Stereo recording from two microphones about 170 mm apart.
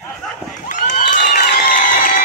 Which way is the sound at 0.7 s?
50° left (ahead or behind).